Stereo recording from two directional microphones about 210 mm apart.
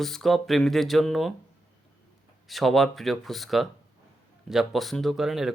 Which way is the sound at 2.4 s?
Centre (ahead or behind).